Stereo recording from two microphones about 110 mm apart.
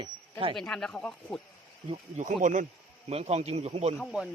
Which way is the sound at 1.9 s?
90° right.